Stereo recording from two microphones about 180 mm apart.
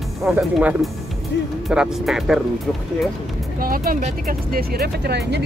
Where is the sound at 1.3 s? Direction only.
80° left.